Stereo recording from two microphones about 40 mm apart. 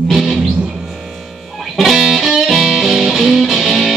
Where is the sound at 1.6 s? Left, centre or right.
Centre.